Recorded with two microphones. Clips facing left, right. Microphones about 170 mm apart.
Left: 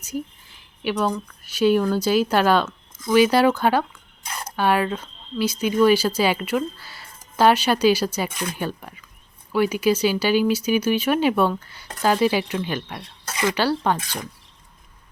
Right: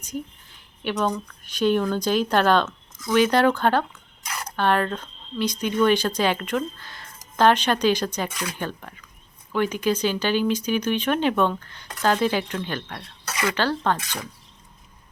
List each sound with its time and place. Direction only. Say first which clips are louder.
0.0 s a sound: left 3 dB; 5° left (ahead or behind)
0.9 s speech: left 1 dB; 5° left (ahead or behind)
4.2 s cutlery: even; 30° left (ahead or behind)
4.4 s speech: left 1 dB; 10° left (ahead or behind)
8.3 s speech: left 2 dB; 25° left (ahead or behind)
8.5 s speech: left 3 dB; 10° left (ahead or behind)